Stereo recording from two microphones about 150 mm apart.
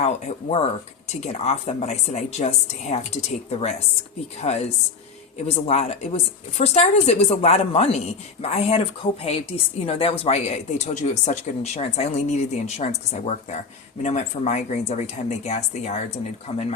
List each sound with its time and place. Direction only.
0.0 s a woman's voice: 50° left (ahead or behind)